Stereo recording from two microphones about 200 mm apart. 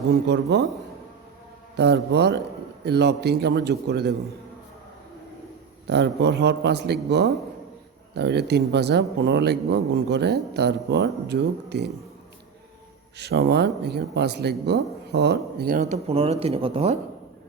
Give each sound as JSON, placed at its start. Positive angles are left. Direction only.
{"t": 0.5, "sound": "speech", "side_deg": -55}
{"t": 1.7, "sound": "speech", "side_deg": -55}
{"t": 5.9, "sound": "speech", "side_deg": -60}
{"t": 13.1, "sound": "speech", "side_deg": -55}
{"t": 15.8, "sound": "speech", "side_deg": -35}